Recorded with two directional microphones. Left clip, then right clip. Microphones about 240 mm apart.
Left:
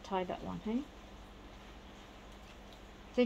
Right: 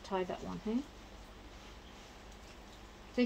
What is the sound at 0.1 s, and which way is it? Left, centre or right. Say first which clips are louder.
Speech: even; left.